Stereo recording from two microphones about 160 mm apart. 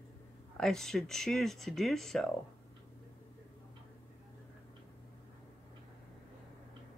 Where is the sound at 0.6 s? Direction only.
5° left (ahead or behind).